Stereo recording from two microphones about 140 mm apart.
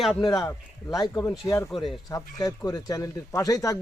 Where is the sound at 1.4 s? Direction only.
20° left (ahead or behind).